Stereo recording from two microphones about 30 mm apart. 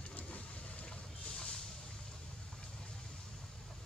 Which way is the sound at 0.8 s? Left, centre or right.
Left.